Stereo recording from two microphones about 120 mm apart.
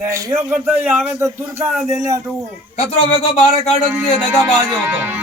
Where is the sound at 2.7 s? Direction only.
70° left (ahead or behind).